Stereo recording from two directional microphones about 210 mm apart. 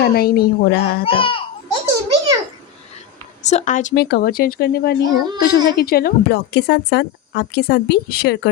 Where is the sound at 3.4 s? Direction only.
35° left (ahead or behind).